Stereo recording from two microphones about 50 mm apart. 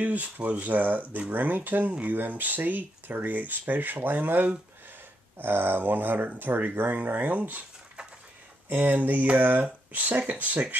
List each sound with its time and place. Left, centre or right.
0.0 s speech: right
8.6 s speech: right